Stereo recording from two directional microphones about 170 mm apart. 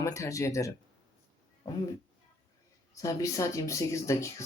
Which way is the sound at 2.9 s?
20° left (ahead or behind).